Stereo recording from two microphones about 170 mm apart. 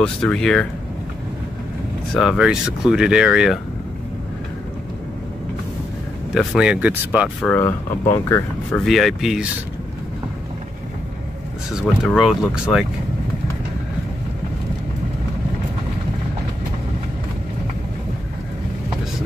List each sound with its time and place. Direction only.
0.0 s speech: 5° left (ahead or behind)
2.1 s speech: centre (ahead or behind)
6.3 s speech: 5° right (ahead or behind)
7.6 s speech: 20° left (ahead or behind)
8.7 s speech: centre (ahead or behind)
12.0 s speech: centre (ahead or behind)